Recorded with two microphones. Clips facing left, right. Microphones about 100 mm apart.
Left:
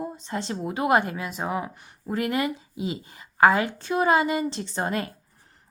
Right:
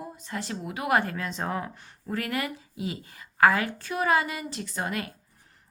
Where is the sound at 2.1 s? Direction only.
20° left (ahead or behind).